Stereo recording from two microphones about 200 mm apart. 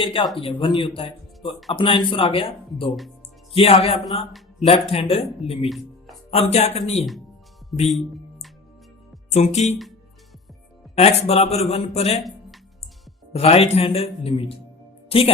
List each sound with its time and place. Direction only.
0.0 s speech: 25° left (ahead or behind)
5.6 s music: centre (ahead or behind)
6.3 s speech: 30° left (ahead or behind)
9.3 s speech: 35° left (ahead or behind)
10.9 s speech: 30° left (ahead or behind)
13.3 s speech: 30° left (ahead or behind)